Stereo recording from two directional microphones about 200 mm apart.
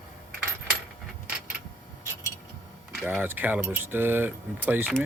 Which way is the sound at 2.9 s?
10° right (ahead or behind).